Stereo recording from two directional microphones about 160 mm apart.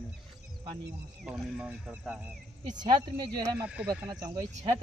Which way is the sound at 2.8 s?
25° right (ahead or behind).